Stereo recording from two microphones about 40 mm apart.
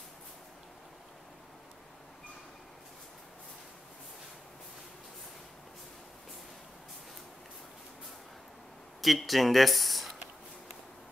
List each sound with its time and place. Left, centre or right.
9.0 s speech: centre